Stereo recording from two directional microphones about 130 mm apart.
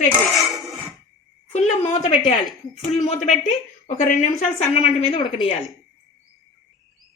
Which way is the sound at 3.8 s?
90° left.